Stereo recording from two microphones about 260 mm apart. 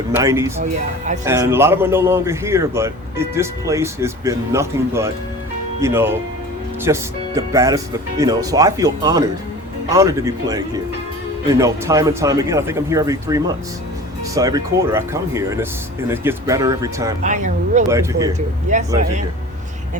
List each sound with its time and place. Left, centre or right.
0.1 s speech: centre
0.6 s speech: right
1.2 s speech: centre
17.2 s speech: right
17.8 s speech: centre
18.3 s speech: right